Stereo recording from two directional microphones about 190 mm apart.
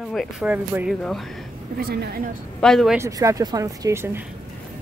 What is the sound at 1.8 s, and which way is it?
Speech, 55° right (ahead or behind).